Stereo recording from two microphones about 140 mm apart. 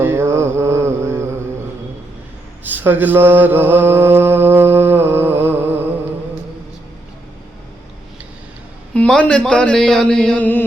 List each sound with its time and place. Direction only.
0.0 s mantra: 15° right (ahead or behind)
2.6 s mantra: 15° right (ahead or behind)
9.0 s speech: 10° left (ahead or behind)